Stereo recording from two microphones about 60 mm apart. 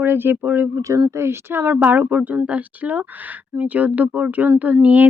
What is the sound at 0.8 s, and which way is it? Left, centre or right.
Speech, right.